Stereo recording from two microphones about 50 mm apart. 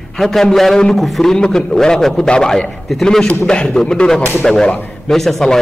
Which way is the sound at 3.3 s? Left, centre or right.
Left.